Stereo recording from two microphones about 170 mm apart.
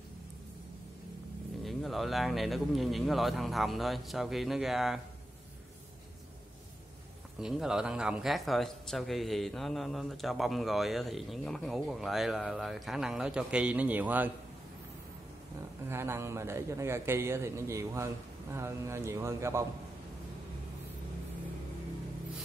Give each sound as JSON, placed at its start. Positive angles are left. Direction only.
{"t": 1.6, "sound": "a man's voice", "side_deg": 0}
{"t": 7.3, "sound": "a man's voice", "side_deg": -5}
{"t": 15.9, "sound": "a man's voice", "side_deg": -15}